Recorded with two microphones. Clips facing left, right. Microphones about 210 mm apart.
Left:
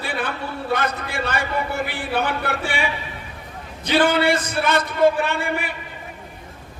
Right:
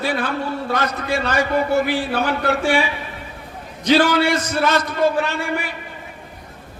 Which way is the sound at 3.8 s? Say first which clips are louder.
Right 2 dB; 55° left (ahead or behind).